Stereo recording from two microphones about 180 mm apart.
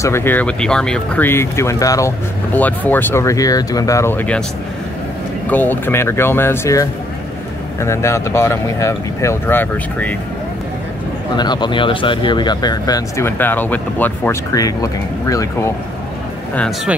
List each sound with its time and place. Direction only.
0.0 s speech: 15° left (ahead or behind)
5.5 s speech: 10° left (ahead or behind)
11.3 s speech: 25° left (ahead or behind)
16.5 s speech: 5° left (ahead or behind)